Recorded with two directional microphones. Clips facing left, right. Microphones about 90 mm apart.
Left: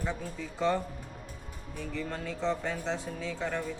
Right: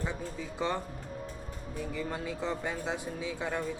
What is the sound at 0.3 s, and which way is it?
Speech, 15° right (ahead or behind).